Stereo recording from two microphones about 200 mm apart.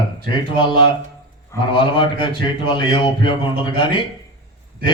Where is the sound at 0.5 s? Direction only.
25° left (ahead or behind).